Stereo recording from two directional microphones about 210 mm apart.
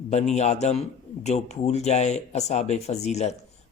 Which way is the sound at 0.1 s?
30° left (ahead or behind).